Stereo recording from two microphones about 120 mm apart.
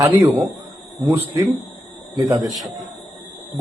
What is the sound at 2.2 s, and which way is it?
Speech, 35° right (ahead or behind).